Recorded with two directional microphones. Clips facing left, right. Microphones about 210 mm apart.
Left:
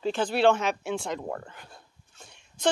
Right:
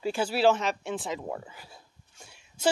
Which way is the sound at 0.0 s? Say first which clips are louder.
Left 1 dB; 10° right (ahead or behind).